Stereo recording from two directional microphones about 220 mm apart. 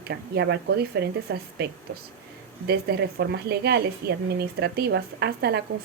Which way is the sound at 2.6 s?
45° right (ahead or behind).